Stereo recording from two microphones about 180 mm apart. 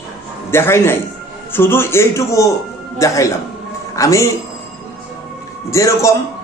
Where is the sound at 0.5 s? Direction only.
15° left (ahead or behind).